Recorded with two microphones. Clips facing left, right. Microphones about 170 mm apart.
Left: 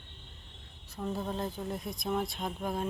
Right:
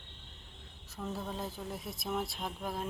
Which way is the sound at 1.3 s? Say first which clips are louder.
Left 4 dB; 5° right (ahead or behind).